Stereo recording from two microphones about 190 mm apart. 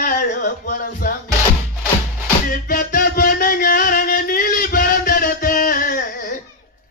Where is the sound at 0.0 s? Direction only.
45° left (ahead or behind).